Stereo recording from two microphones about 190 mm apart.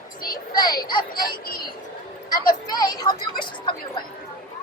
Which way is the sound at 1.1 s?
50° left (ahead or behind).